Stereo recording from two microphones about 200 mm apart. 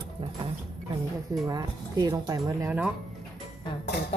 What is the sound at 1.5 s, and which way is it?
Speech, 20° right (ahead or behind).